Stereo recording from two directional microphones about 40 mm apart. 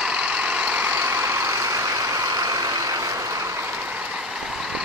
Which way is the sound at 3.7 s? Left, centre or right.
Right.